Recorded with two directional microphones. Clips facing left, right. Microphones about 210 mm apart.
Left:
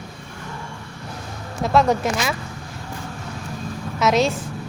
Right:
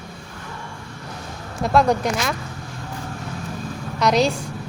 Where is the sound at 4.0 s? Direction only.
Centre (ahead or behind).